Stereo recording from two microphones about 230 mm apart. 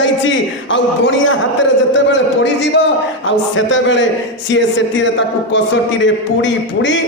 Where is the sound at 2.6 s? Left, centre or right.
Left.